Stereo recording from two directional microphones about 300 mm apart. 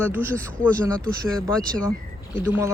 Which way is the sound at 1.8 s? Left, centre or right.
Centre.